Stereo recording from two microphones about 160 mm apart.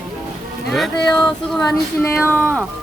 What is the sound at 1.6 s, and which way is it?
Child singing, 15° left (ahead or behind).